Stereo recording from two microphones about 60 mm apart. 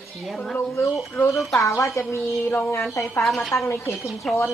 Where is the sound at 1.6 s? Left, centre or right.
Left.